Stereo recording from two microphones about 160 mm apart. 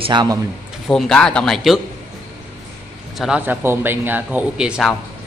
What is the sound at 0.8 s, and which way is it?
Speech, 5° left (ahead or behind).